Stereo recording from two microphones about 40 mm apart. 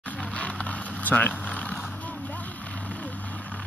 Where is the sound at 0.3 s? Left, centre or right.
Left.